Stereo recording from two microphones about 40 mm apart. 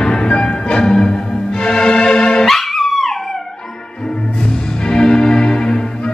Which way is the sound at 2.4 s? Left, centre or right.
Centre.